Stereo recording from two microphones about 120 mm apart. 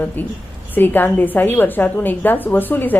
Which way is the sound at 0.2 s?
15° left (ahead or behind).